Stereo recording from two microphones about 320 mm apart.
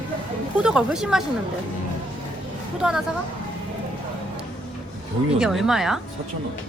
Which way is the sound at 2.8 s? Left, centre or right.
Centre.